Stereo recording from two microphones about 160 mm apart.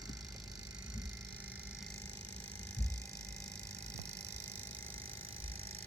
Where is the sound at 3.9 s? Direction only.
20° right (ahead or behind).